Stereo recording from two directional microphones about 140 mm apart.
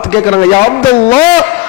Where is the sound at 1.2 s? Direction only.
10° left (ahead or behind).